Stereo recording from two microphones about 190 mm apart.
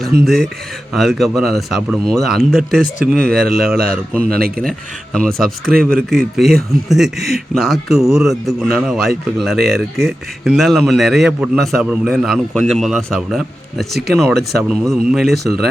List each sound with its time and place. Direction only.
0.9 s a man's voice: centre (ahead or behind)
4.4 s speech: 50° right (ahead or behind)
5.1 s a man's voice: 5° left (ahead or behind)